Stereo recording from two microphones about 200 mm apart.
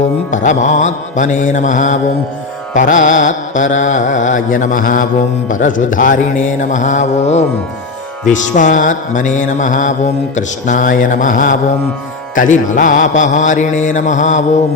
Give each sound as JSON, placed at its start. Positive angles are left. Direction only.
{"t": 0.3, "sound": "mantra", "side_deg": 40}